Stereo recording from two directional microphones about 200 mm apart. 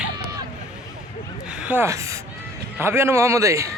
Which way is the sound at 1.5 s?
5° right (ahead or behind).